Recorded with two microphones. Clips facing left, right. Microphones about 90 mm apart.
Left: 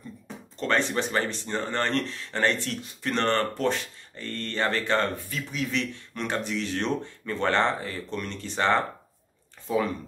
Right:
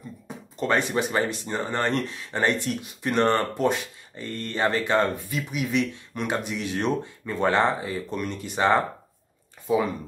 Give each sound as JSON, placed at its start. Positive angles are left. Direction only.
{"t": 0.6, "sound": "speech", "side_deg": -10}